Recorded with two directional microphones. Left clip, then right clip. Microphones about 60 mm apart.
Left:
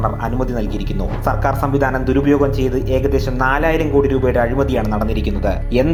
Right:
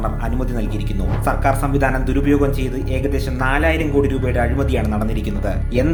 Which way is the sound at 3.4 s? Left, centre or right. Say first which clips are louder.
Left 1 dB; centre.